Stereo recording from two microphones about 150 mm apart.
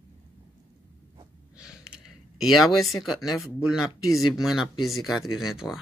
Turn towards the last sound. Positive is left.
turn(degrees=-5)  # may be behind; listen again after turning